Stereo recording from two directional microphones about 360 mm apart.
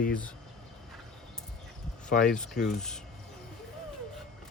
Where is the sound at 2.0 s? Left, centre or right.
Left.